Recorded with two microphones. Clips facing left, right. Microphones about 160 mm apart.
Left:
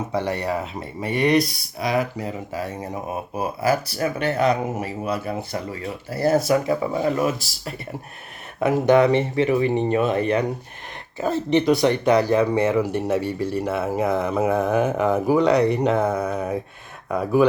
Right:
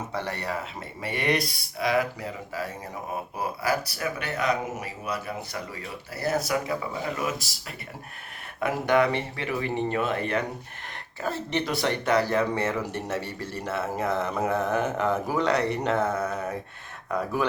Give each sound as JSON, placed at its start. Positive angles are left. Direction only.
{"t": 0.1, "sound": "speech", "side_deg": 15}
{"t": 8.6, "sound": "speech", "side_deg": 20}